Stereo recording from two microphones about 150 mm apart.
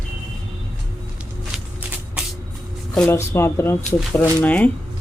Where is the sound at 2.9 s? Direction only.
15° left (ahead or behind).